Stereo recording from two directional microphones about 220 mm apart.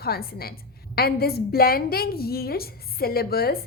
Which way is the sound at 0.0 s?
45° left (ahead or behind).